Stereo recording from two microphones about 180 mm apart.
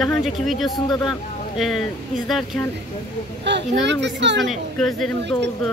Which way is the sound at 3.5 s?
75° right (ahead or behind).